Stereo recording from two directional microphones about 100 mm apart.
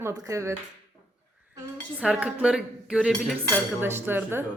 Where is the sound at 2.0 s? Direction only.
10° right (ahead or behind).